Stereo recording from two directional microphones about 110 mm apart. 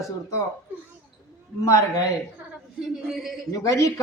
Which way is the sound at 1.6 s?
30° left (ahead or behind).